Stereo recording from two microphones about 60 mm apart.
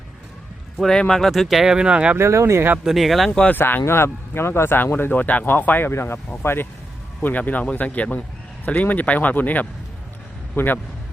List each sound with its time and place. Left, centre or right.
0.8 s speech: centre
1.3 s speech: centre
2.1 s speech: right
2.9 s speech: centre
3.5 s speech: left
5.9 s speech: left
7.2 s a man's voice: left